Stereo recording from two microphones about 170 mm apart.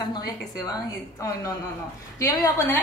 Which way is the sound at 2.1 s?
15° left (ahead or behind).